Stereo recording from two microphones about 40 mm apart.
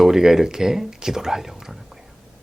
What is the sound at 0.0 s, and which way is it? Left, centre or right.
Speech, centre.